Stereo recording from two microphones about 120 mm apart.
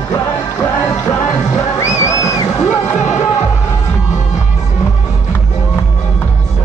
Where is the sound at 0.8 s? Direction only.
25° left (ahead or behind).